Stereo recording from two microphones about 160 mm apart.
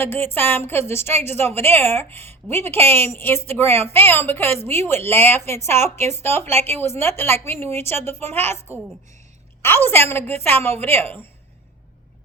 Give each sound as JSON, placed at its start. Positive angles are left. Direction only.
{"t": 0.0, "sound": "a woman's voice", "side_deg": 15}